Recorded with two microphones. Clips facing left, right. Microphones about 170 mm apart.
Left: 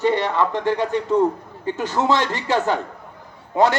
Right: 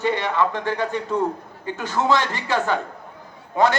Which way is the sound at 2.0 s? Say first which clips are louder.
Even; 15° right (ahead or behind).